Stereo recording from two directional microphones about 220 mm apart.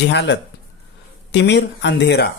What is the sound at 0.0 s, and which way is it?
Speech, 50° left (ahead or behind).